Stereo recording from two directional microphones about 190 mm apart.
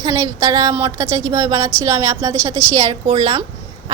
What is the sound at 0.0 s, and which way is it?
A woman's voice, 20° right (ahead or behind).